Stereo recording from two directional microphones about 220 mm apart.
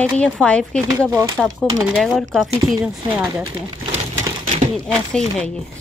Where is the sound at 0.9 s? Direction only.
15° right (ahead or behind).